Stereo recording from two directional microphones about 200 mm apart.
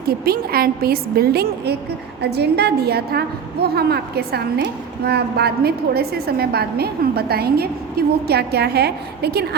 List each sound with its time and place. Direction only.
0.3 s a woman's voice: 50° right (ahead or behind)